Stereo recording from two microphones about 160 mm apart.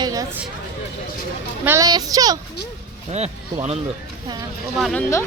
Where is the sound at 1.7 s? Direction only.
20° right (ahead or behind).